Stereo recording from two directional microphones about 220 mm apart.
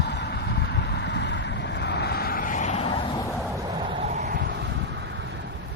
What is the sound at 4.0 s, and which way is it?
Vehicle, 30° right (ahead or behind).